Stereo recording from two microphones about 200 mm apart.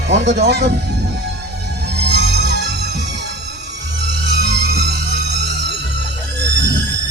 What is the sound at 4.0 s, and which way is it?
Music, 60° right (ahead or behind).